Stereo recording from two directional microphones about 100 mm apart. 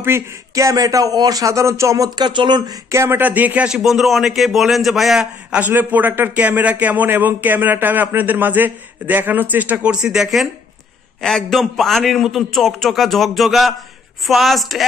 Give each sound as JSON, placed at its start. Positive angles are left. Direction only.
{"t": 0.0, "sound": "a man's voice", "side_deg": -30}
{"t": 2.2, "sound": "speech", "side_deg": -50}
{"t": 2.9, "sound": "a man's voice", "side_deg": -25}